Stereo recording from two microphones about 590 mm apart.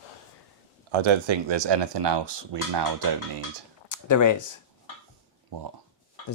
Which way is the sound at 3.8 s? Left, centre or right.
Left.